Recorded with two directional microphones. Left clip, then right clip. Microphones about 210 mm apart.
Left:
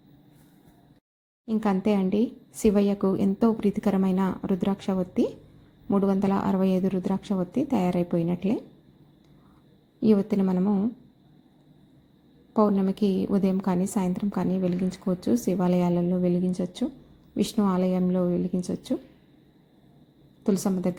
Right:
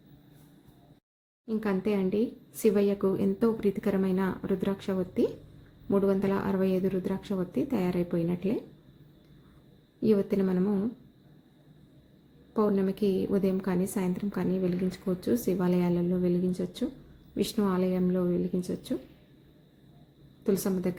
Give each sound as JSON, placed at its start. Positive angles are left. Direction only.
{"t": 1.6, "sound": "a woman's voice", "side_deg": 20}
{"t": 10.0, "sound": "a woman's voice", "side_deg": 15}
{"t": 12.5, "sound": "a woman's voice", "side_deg": 15}
{"t": 20.4, "sound": "a woman's voice", "side_deg": 15}